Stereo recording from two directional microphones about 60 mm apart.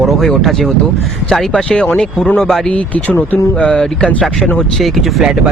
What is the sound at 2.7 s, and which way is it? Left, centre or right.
Speech, left.